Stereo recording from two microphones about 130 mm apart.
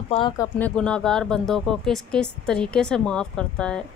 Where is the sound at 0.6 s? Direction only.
10° left (ahead or behind).